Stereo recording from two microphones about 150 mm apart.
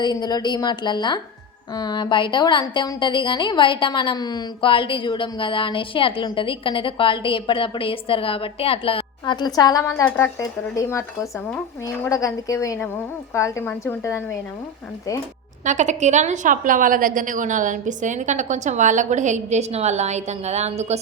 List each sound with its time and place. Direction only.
0.0 s speech: 25° left (ahead or behind)
15.6 s a woman's voice: 50° right (ahead or behind)